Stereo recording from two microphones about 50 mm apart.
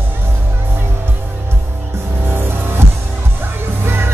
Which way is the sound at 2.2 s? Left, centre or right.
Right.